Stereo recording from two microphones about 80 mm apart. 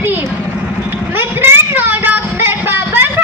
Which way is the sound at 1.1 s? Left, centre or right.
Right.